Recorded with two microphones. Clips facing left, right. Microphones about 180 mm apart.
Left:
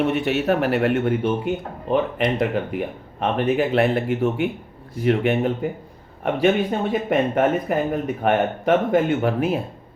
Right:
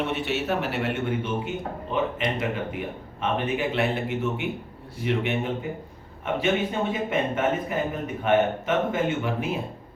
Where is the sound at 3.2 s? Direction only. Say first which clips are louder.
Left 6 dB; 45° left (ahead or behind).